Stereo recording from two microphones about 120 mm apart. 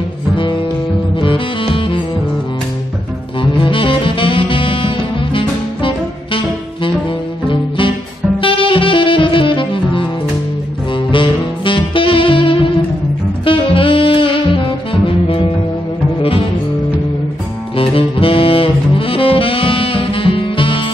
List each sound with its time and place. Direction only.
0.4 s music: 45° left (ahead or behind)
3.3 s saxophone: 45° left (ahead or behind)
7.4 s music: 45° left (ahead or behind)
8.4 s saxophone: 45° left (ahead or behind)
11.1 s saxophone: 45° left (ahead or behind)
17.7 s saxophone: 50° left (ahead or behind)